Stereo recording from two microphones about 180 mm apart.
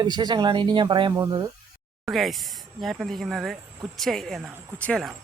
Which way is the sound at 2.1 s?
Centre (ahead or behind).